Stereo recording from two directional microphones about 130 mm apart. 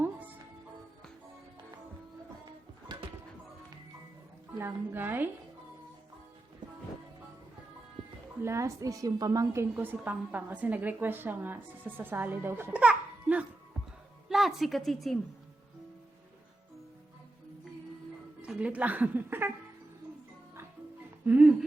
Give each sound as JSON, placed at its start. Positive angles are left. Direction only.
{"t": 2.9, "sound": "music", "side_deg": -35}
{"t": 4.5, "sound": "a woman's voice", "side_deg": -15}
{"t": 8.4, "sound": "a woman's voice", "side_deg": -20}
{"t": 18.4, "sound": "a woman's voice", "side_deg": -10}
{"t": 21.2, "sound": "a sound", "side_deg": -10}